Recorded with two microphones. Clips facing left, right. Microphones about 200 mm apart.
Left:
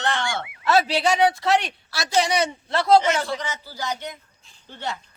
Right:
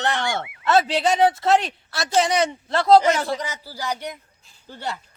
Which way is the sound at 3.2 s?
35° right (ahead or behind).